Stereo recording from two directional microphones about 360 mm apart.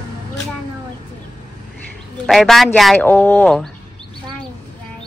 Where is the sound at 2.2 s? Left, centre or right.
Centre.